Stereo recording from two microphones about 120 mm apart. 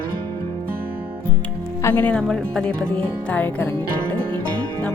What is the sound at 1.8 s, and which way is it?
Speech, 15° left (ahead or behind).